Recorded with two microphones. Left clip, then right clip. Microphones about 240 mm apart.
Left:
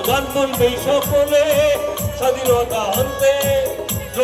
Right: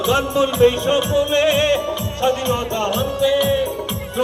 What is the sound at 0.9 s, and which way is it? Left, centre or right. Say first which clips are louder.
Music: left 2 dB; left.